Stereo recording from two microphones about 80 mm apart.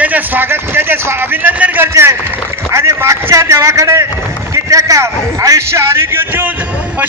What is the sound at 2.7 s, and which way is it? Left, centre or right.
A man's voice, right.